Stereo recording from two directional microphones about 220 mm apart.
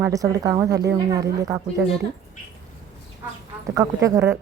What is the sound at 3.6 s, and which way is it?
Speech, 15° right (ahead or behind).